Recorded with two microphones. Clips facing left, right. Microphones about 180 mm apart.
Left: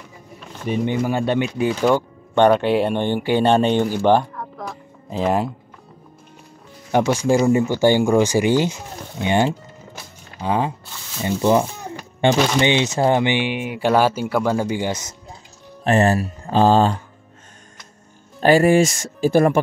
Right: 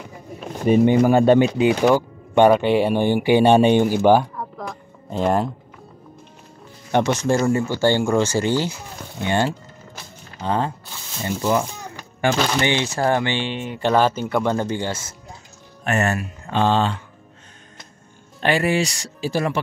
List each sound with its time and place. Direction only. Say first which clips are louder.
1.0 s speech: right 6 dB; 45° right (ahead or behind)
1.6 s speech: right 2 dB; 15° right (ahead or behind); by 5.5 s centre (ahead or behind)
6.9 s speech: left 2 dB; 10° left (ahead or behind)
11.2 s speech: left 4 dB; 25° left (ahead or behind)
12.4 s speech: left 3 dB; 10° left (ahead or behind)
15.8 s speech: left 5 dB; 30° left (ahead or behind)
18.4 s speech: left 6 dB; 40° left (ahead or behind)